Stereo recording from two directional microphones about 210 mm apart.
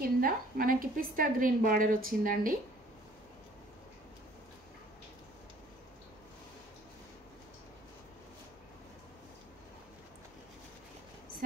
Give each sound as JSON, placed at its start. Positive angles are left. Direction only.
{"t": 0.0, "sound": "a woman's voice", "side_deg": -45}